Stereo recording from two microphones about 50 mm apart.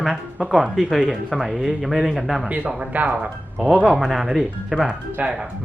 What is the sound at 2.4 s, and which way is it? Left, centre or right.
Speech, right.